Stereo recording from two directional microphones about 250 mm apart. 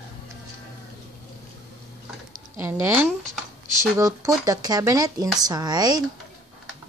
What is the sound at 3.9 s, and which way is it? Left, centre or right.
Speech, centre.